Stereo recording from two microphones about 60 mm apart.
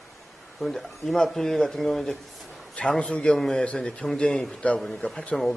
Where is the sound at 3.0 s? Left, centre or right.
Centre.